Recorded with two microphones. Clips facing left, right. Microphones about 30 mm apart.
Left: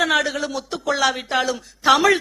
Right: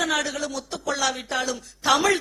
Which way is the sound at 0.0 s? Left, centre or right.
Centre.